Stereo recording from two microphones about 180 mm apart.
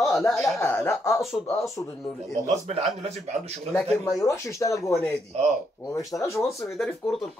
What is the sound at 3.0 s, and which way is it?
Speech, 35° right (ahead or behind).